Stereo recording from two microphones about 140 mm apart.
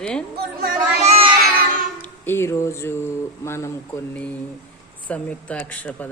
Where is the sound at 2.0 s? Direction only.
15° left (ahead or behind).